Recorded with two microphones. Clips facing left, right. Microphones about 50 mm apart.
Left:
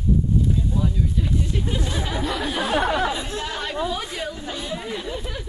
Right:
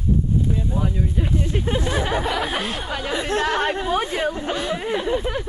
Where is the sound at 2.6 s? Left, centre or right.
Left.